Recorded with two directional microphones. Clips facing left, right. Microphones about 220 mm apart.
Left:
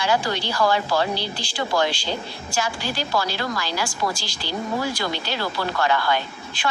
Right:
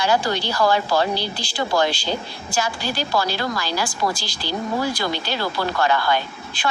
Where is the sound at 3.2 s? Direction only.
35° right (ahead or behind).